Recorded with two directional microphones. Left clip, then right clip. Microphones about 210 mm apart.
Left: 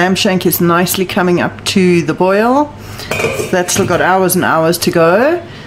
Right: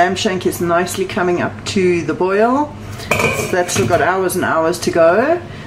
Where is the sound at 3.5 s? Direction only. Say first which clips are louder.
Left 4 dB; 45° left (ahead or behind).